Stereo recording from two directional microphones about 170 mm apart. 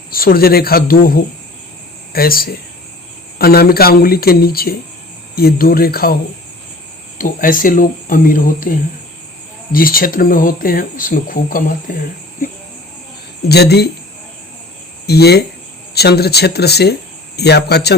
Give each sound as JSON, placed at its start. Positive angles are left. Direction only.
{"t": 0.1, "sound": "speech", "side_deg": 60}
{"t": 7.2, "sound": "speech", "side_deg": 55}
{"t": 13.5, "sound": "speech", "side_deg": 70}
{"t": 15.0, "sound": "speech", "side_deg": 70}